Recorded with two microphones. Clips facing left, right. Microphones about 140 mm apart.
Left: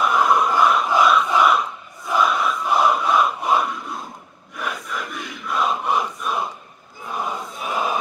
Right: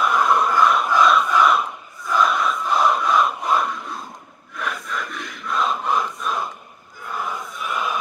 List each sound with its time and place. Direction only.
0.0 s crowd: 5° left (ahead or behind)
7.1 s mantra: 20° left (ahead or behind)